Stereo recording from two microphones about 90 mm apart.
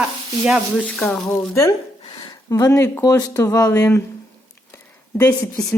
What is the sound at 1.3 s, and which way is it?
Speech, 35° left (ahead or behind).